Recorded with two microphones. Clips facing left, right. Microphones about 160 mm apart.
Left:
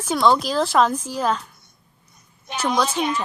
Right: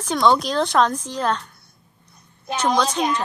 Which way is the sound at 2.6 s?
5° left (ahead or behind).